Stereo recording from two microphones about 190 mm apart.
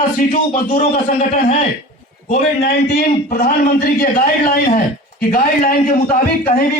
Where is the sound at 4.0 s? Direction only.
50° left (ahead or behind).